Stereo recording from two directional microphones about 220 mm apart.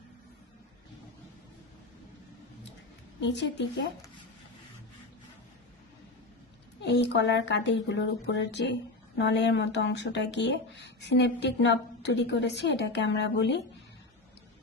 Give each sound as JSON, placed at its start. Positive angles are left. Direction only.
{"t": 3.2, "sound": "speech", "side_deg": 55}
{"t": 6.8, "sound": "speech", "side_deg": 50}